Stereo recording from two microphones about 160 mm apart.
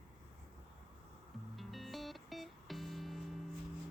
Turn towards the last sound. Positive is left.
turn(degrees=0)  # may be behind; listen again after turning